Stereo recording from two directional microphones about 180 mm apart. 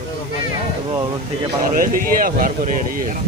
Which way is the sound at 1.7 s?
50° right (ahead or behind).